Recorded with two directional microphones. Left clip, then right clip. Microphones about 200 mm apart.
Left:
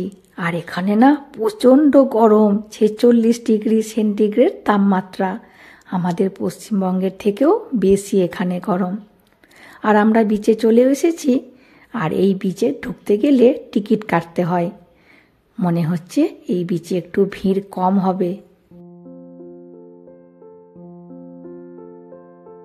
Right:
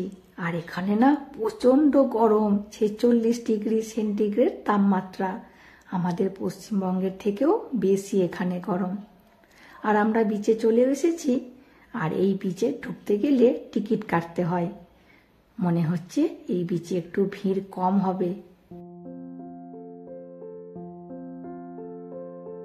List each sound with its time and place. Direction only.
0.4 s a woman's voice: 40° left (ahead or behind)